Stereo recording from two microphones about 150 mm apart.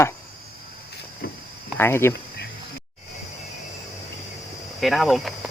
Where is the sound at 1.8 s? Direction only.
15° left (ahead or behind).